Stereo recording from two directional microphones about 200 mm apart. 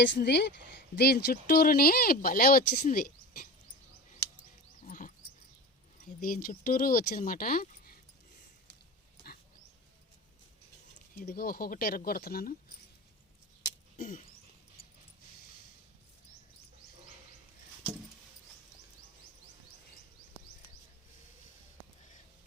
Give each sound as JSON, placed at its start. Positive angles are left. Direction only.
{"t": 0.0, "sound": "a woman's voice", "side_deg": 60}
{"t": 4.9, "sound": "dog", "side_deg": 40}
{"t": 6.1, "sound": "speech", "side_deg": 45}
{"t": 11.2, "sound": "speech", "side_deg": 45}
{"t": 13.9, "sound": "a sound", "side_deg": 40}